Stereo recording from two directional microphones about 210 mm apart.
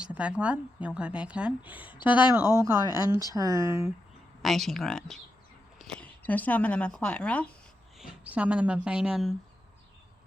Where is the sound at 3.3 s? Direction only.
15° right (ahead or behind).